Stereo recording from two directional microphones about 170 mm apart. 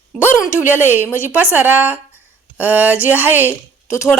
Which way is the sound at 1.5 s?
10° right (ahead or behind).